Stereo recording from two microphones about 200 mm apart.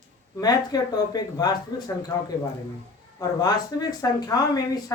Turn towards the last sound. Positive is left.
turn(degrees=20)  # may be behind; listen again after turning